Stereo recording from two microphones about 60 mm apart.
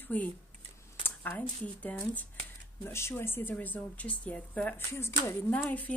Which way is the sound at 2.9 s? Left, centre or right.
Left.